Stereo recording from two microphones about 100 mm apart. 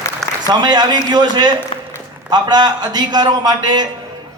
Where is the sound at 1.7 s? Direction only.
80° left.